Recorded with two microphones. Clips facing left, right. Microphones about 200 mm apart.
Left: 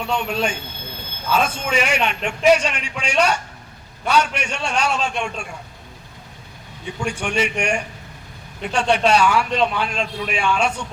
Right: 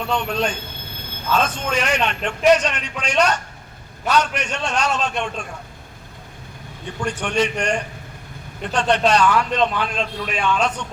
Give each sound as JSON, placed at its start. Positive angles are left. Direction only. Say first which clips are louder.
{"t": 0.1, "sound": "a man's voice", "louder": "even", "side_deg": 10}
{"t": 7.0, "sound": "a man's voice", "louder": "right 1 dB", "side_deg": 10}